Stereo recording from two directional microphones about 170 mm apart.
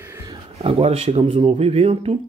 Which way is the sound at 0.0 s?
15° right (ahead or behind).